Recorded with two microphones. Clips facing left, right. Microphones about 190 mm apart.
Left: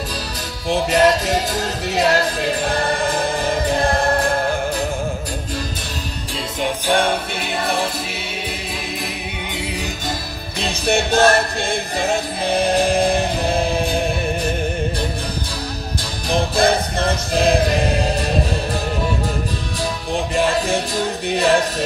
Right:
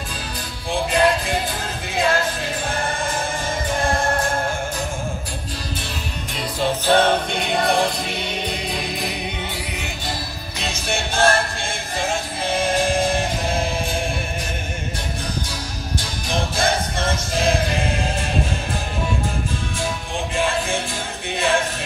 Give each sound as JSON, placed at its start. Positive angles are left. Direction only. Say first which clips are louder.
{"t": 0.7, "sound": "music", "louder": "left 3 dB", "side_deg": 40}
{"t": 6.6, "sound": "music", "louder": "right 1 dB", "side_deg": 10}
{"t": 10.6, "sound": "music", "louder": "left 7 dB", "side_deg": 35}
{"t": 16.0, "sound": "music", "louder": "left 5 dB", "side_deg": 35}
{"t": 20.3, "sound": "music", "louder": "left 3 dB", "side_deg": 40}